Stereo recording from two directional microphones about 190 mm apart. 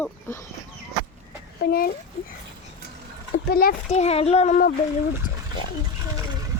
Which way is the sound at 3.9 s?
35° left (ahead or behind).